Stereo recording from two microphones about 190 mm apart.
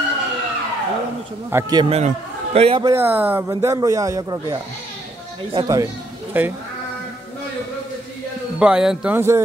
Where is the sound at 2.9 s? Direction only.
10° right (ahead or behind).